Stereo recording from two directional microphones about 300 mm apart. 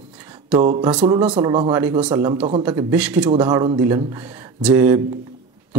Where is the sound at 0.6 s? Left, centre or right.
Centre.